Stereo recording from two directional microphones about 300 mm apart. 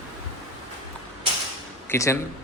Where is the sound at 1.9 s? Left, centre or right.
Centre.